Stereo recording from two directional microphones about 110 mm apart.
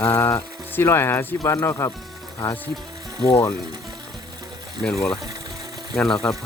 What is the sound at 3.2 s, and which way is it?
Speech, 30° left (ahead or behind).